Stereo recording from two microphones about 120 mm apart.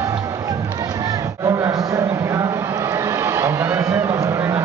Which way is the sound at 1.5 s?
25° right (ahead or behind).